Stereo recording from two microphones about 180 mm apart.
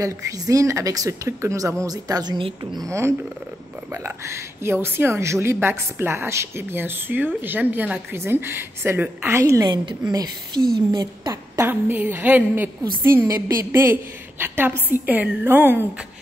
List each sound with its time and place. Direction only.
0.0 s a woman's voice: 20° right (ahead or behind)